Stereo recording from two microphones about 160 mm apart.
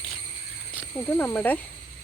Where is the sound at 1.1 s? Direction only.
10° left (ahead or behind).